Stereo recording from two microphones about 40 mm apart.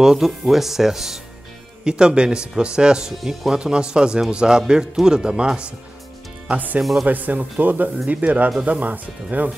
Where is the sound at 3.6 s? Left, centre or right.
Right.